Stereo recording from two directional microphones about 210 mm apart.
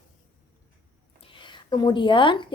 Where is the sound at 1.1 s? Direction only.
20° left (ahead or behind).